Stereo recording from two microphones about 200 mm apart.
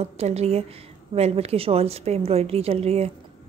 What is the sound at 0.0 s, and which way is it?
A woman's voice, 30° right (ahead or behind).